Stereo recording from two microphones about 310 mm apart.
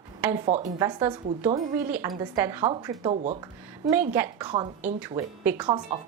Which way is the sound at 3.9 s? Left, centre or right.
Centre.